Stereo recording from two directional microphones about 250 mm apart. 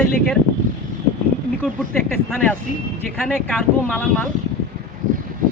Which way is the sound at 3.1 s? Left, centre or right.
Centre.